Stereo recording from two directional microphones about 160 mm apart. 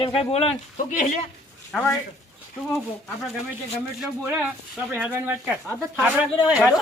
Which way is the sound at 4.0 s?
5° right (ahead or behind).